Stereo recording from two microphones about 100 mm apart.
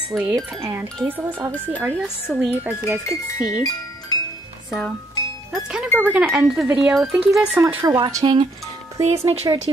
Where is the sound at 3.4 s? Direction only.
40° left (ahead or behind).